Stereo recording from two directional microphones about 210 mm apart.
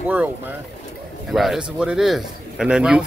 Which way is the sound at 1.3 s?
Centre (ahead or behind).